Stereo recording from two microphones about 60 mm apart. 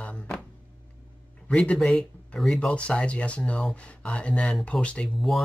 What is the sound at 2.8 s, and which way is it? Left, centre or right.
Speech, centre.